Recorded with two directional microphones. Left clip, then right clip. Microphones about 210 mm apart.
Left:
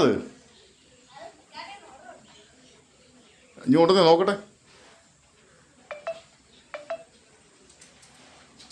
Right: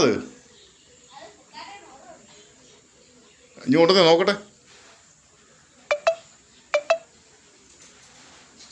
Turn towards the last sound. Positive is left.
turn(degrees=-40)  # may be behind; listen again after turning